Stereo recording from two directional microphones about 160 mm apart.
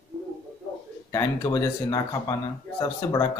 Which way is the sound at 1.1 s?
20° left (ahead or behind).